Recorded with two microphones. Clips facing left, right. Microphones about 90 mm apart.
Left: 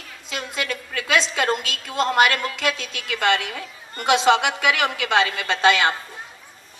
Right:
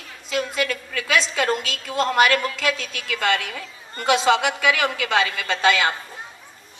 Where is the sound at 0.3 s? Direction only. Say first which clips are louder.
Right 4 dB; 25° left (ahead or behind).